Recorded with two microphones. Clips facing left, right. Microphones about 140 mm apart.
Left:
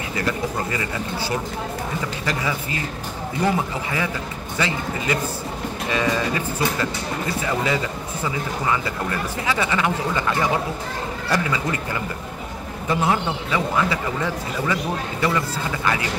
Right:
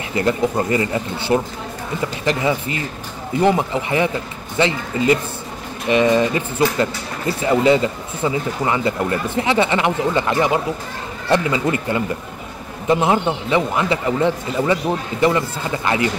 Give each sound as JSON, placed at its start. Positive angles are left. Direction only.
{"t": 0.1, "sound": "a man's voice", "side_deg": -25}
{"t": 3.4, "sound": "a man's voice", "side_deg": -25}